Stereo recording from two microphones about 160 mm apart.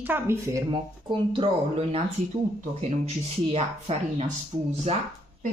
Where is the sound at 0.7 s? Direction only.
30° right (ahead or behind).